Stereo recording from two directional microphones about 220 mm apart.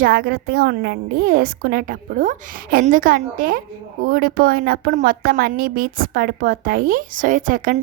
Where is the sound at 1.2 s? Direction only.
40° right (ahead or behind).